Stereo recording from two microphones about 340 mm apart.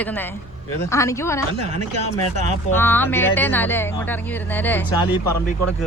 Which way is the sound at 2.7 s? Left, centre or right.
Centre.